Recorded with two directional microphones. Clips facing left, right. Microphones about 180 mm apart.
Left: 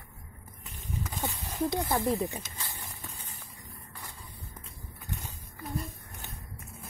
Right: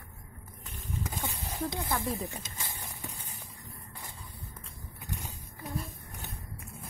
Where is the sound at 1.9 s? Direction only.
20° left (ahead or behind).